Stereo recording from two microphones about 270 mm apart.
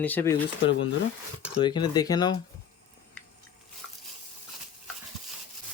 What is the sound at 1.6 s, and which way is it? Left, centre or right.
Speech, centre.